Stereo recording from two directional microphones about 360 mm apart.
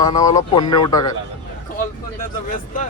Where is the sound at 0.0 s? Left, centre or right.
Centre.